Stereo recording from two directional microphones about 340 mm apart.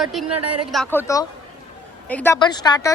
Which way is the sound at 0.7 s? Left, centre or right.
Centre.